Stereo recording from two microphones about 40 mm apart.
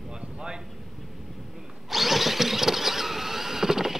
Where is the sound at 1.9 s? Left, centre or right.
Centre.